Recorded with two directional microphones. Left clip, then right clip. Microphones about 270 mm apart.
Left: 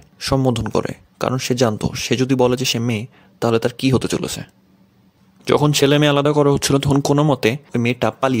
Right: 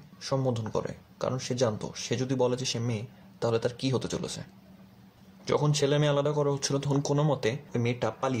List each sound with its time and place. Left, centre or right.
0.2 s speech: left